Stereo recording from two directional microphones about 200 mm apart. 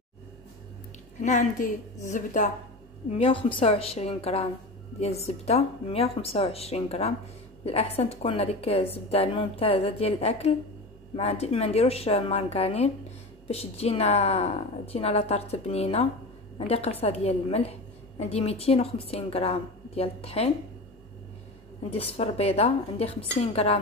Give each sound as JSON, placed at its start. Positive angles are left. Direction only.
{"t": 1.2, "sound": "a woman's voice", "side_deg": 40}
{"t": 21.9, "sound": "a woman's voice", "side_deg": 30}